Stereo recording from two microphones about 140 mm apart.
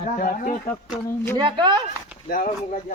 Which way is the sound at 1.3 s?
35° right (ahead or behind).